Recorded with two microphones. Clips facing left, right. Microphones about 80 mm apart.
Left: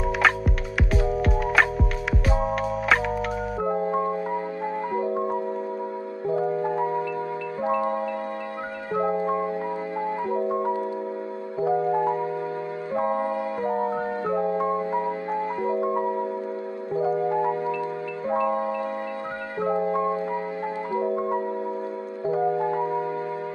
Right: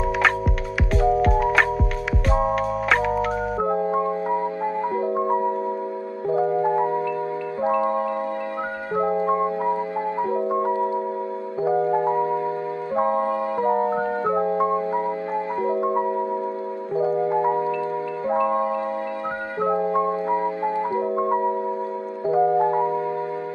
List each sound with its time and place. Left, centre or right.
0.9 s music: centre
3.6 s music: right
8.9 s music: right
10.5 s music: right
17.4 s marimba: right
19.6 s music: right
22.5 s music: right